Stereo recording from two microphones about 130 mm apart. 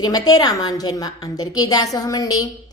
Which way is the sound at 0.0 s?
30° left (ahead or behind).